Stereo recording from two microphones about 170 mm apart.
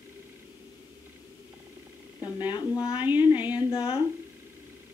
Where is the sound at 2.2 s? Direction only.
25° left (ahead or behind).